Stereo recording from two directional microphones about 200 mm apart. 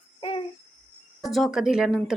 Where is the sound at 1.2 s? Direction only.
Centre (ahead or behind).